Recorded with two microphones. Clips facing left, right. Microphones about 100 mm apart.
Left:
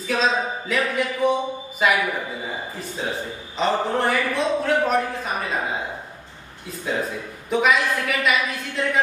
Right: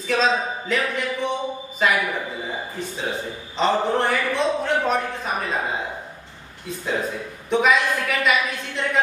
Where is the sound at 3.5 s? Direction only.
Centre (ahead or behind).